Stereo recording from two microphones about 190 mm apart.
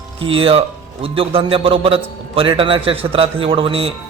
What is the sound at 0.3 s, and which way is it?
A man's voice, 30° right (ahead or behind).